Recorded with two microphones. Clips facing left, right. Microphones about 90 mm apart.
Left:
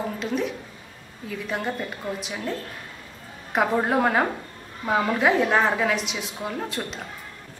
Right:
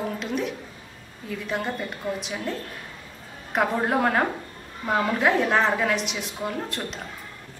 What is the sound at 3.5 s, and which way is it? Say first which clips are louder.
A woman's voice: left 1 dB; 5° left (ahead or behind).